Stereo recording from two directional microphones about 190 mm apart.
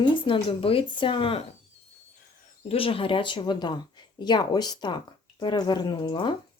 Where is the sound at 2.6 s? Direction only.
30° left (ahead or behind).